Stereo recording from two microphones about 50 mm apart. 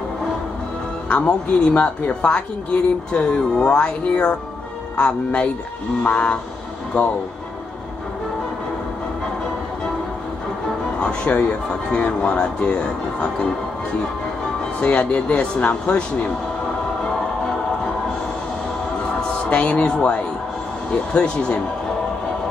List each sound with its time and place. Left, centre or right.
1.0 s a woman's voice: left
11.0 s a woman's voice: left
14.8 s a woman's voice: left
19.1 s a woman's voice: left